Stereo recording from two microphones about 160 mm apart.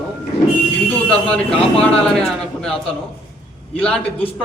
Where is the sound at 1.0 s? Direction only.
5° left (ahead or behind).